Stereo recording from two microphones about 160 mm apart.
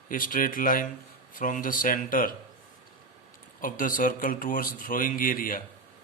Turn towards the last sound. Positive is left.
turn(degrees=60)  # may be behind; listen again after turning